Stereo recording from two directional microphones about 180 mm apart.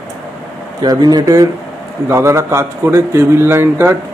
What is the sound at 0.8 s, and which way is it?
A man's voice, 20° right (ahead or behind).